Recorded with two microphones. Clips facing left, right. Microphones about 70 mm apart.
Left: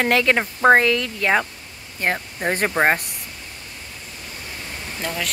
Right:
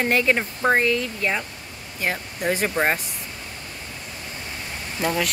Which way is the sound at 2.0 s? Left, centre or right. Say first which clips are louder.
Left 2 dB; left.